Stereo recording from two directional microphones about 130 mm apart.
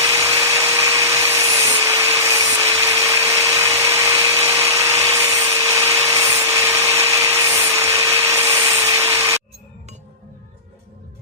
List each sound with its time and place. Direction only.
0.0 s wood: 25° right (ahead or behind)